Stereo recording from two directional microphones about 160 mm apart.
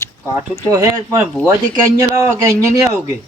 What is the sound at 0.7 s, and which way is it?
Speech, 15° right (ahead or behind).